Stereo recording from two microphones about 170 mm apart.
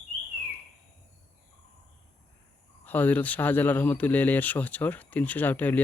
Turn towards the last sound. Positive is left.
turn(degrees=10)  # may be behind; listen again after turning